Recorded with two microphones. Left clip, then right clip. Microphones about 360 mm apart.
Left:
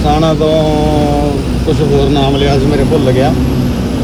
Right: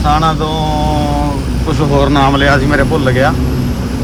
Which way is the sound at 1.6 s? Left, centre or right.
Centre.